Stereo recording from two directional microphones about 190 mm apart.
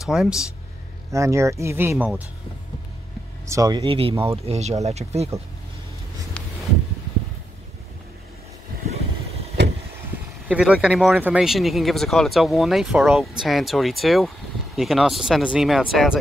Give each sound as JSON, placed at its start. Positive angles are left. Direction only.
{"t": 0.0, "sound": "speech", "side_deg": -5}
{"t": 1.1, "sound": "speech", "side_deg": -15}
{"t": 3.4, "sound": "speech", "side_deg": -15}
{"t": 10.5, "sound": "speech", "side_deg": -5}